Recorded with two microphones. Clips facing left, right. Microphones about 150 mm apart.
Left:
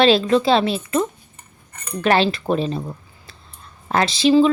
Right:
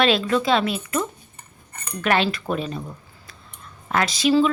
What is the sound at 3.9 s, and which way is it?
Speech, 30° left (ahead or behind).